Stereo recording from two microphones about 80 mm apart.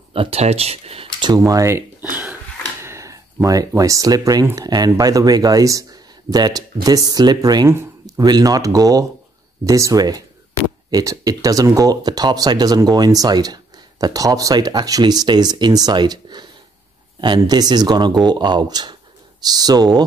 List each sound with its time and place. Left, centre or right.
0.2 s speech: right
1.4 s speech: right
2.8 s a sound: right
3.4 s speech: right